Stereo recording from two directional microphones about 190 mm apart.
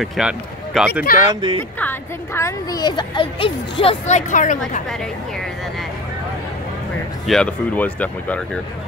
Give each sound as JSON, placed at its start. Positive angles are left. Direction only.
{"t": 0.0, "sound": "a man's voice", "side_deg": 0}
{"t": 1.1, "sound": "speech", "side_deg": -20}
{"t": 1.8, "sound": "a woman's voice", "side_deg": 10}
{"t": 7.2, "sound": "speech", "side_deg": 5}